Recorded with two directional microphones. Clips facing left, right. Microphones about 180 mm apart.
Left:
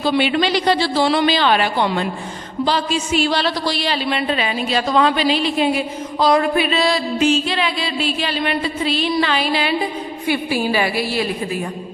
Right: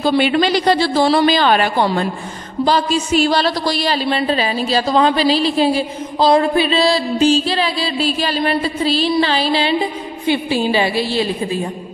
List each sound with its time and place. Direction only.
0.0 s a woman's voice: 45° right (ahead or behind); by 11.2 s 25° right (ahead or behind)